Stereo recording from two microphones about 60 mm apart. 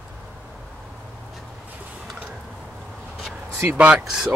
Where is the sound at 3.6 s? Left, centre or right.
Right.